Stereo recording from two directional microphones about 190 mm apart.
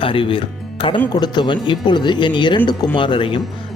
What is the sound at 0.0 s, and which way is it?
Speech, 25° left (ahead or behind).